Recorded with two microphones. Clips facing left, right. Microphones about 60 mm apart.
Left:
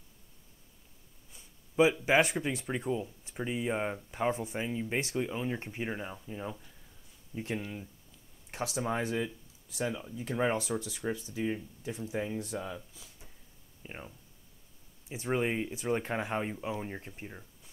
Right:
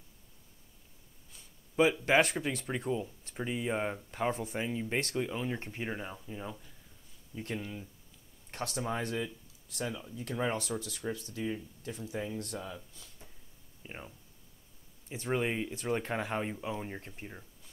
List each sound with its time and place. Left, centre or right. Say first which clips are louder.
1.3 s speech: left 1 dB; centre
7.3 s speech: left 2 dB; centre
8.5 s speech: left 2 dB; centre